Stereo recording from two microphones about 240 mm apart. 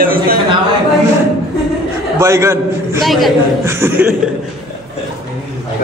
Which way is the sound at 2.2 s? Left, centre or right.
Centre.